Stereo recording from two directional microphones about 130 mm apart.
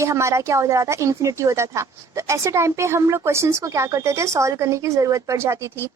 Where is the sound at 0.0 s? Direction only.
25° right (ahead or behind).